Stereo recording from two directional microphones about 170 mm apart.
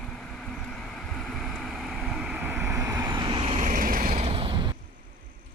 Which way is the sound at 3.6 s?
50° right (ahead or behind).